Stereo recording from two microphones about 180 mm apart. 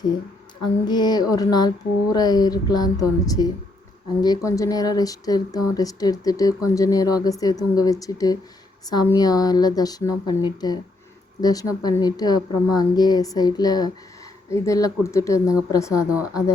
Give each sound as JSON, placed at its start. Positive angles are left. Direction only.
{"t": 0.9, "sound": "speech", "side_deg": 25}
{"t": 16.0, "sound": "a woman's voice", "side_deg": -5}